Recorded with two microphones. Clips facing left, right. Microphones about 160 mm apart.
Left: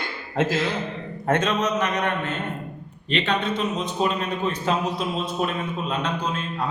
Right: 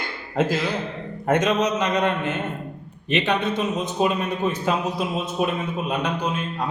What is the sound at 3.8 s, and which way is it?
Speech, 10° right (ahead or behind).